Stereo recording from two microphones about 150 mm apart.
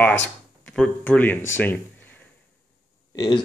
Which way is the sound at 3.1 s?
30° left (ahead or behind).